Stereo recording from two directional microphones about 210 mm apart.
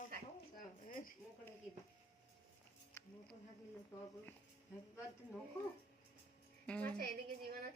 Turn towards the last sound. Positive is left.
turn(degrees=5)  # may be behind; listen again after turning